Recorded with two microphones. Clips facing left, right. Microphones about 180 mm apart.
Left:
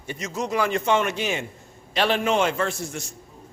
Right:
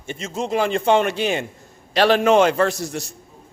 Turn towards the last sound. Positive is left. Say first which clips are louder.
# right 5 dB
turn(degrees=-35)  # may be behind; listen again after turning